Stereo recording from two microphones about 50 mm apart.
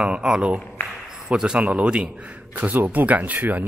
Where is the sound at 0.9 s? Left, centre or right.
Centre.